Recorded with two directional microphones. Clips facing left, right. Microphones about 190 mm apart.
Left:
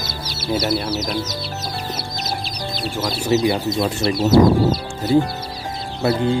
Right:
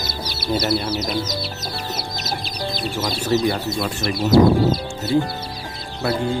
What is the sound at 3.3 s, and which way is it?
Music, 15° left (ahead or behind).